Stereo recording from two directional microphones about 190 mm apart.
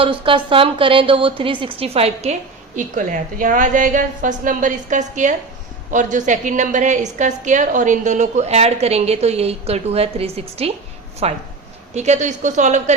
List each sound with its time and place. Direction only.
0.0 s a woman's voice: 25° right (ahead or behind)
2.7 s a woman's voice: 40° right (ahead or behind)